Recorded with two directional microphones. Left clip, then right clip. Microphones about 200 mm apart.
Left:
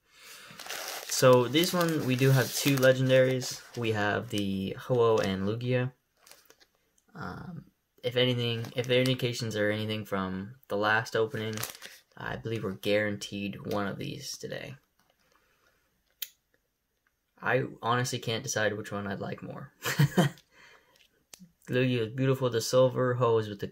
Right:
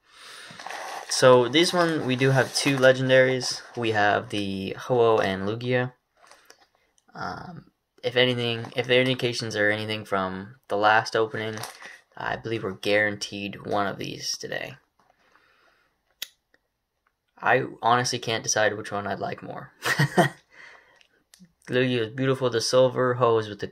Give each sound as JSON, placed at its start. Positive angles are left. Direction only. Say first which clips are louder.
{"t": 0.1, "sound": "a sound", "louder": "right 6 dB", "side_deg": 35}
{"t": 1.1, "sound": "speech", "louder": "right 5 dB", "side_deg": 35}
{"t": 7.4, "sound": "speech", "louder": "right 5 dB", "side_deg": 35}
{"t": 17.4, "sound": "speech", "louder": "right 7 dB", "side_deg": 30}